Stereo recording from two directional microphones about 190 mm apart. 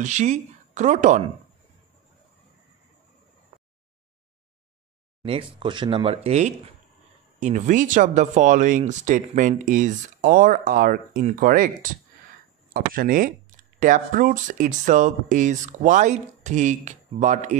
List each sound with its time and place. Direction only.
0.0 s speech: 40° right (ahead or behind)
5.2 s speech: 25° right (ahead or behind)